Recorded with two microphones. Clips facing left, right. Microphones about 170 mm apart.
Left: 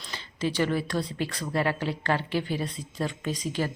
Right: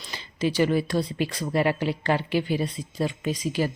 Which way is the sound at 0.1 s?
10° right (ahead or behind).